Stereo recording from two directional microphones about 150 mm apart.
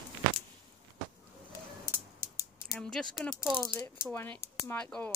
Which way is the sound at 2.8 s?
5° left (ahead or behind).